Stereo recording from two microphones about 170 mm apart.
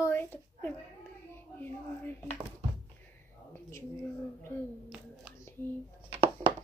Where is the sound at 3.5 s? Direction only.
15° left (ahead or behind).